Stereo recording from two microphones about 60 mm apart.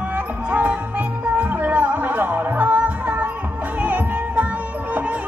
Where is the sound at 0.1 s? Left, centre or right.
Right.